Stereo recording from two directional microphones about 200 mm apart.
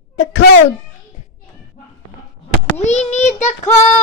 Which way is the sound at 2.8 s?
35° left (ahead or behind).